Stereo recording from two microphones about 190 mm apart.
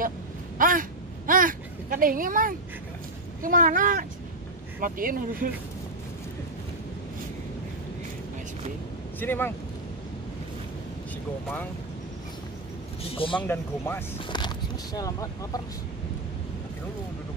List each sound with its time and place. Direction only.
0.6 s a sound: 45° right (ahead or behind)
3.4 s speech: 45° right (ahead or behind)
9.2 s speech: 10° left (ahead or behind)
13.0 s speech: 30° left (ahead or behind)
13.4 s speech: 10° left (ahead or behind)